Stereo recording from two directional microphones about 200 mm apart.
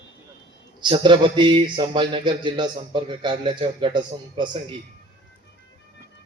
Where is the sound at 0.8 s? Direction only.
25° right (ahead or behind).